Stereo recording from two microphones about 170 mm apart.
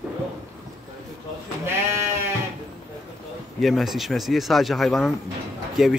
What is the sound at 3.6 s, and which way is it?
Speech, centre (ahead or behind).